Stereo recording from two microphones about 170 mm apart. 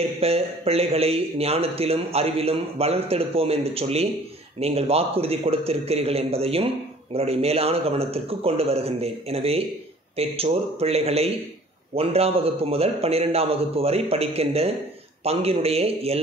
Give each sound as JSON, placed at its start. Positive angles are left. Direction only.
{"t": 0.2, "sound": "speech", "side_deg": -35}